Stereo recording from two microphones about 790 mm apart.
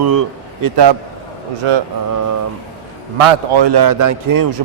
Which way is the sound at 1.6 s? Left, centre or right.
Right.